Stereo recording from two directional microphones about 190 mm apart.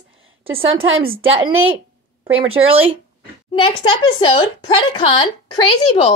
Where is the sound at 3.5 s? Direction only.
25° left (ahead or behind).